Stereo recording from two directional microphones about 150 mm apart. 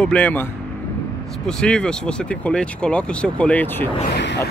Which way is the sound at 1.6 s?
5° left (ahead or behind).